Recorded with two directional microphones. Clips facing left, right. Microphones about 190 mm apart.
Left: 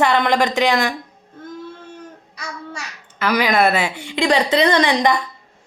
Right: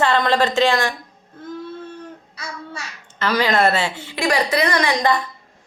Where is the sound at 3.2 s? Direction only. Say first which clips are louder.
Left 1 dB; 10° left (ahead or behind).